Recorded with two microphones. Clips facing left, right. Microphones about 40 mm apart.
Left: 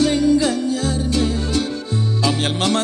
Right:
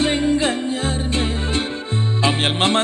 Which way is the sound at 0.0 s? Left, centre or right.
Right.